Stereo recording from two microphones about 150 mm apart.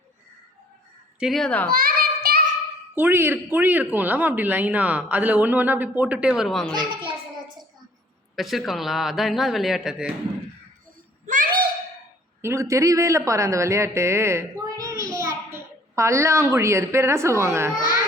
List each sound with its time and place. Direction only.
1.2 s speech: centre (ahead or behind)
1.6 s child singing: 80° right
2.9 s speech: 15° right (ahead or behind)
6.7 s a sound: 30° right (ahead or behind)
8.4 s speech: centre (ahead or behind)
11.3 s a sound: 70° right (ahead or behind)
12.4 s speech: 20° right (ahead or behind)